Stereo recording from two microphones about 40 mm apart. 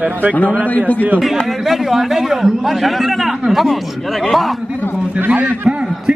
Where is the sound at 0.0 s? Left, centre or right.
Right.